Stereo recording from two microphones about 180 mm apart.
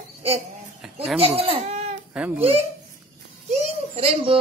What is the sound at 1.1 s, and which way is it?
A woman's voice, 35° right (ahead or behind).